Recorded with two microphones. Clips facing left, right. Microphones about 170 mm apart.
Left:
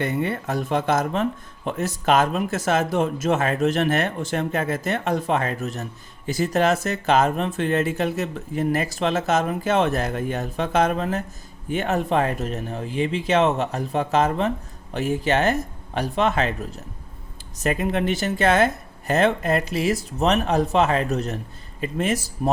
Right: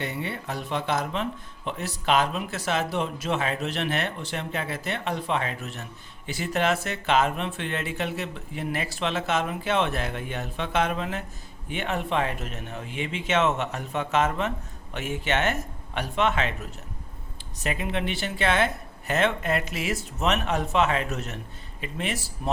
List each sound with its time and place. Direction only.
0.0 s speech: 50° left (ahead or behind)